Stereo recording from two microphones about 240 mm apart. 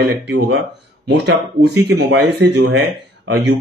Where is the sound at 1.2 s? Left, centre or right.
Right.